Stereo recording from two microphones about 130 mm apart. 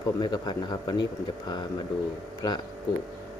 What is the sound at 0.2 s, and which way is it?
Speech, 35° left (ahead or behind).